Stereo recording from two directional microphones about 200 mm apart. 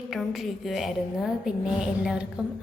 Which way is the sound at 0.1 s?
Centre (ahead or behind).